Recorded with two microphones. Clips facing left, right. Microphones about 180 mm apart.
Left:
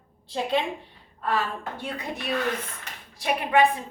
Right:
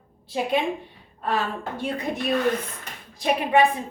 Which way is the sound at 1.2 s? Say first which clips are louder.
Right 1 dB; 20° right (ahead or behind).